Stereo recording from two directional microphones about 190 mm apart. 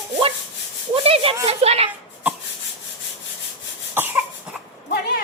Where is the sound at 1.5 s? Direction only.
35° right (ahead or behind).